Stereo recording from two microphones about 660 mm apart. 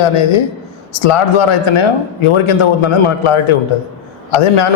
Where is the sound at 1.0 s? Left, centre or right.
Left.